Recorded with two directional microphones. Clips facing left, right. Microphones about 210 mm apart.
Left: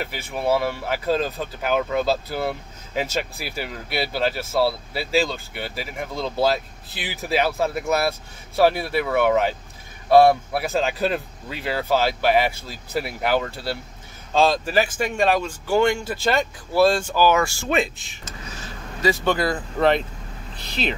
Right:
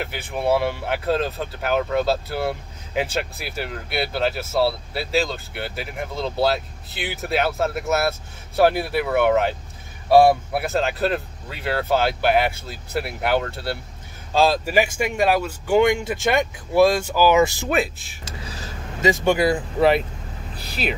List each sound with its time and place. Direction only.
0.0 s speech: centre (ahead or behind); by 17.6 s 20° right (ahead or behind)
17.6 s speech: 5° right (ahead or behind)
18.2 s a sound: 35° right (ahead or behind)
19.2 s speech: 10° right (ahead or behind)